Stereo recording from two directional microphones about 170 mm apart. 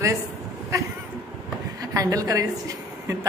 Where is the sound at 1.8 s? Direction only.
20° right (ahead or behind).